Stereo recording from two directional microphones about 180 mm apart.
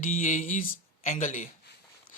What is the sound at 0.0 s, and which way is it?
A man's voice, 45° left (ahead or behind).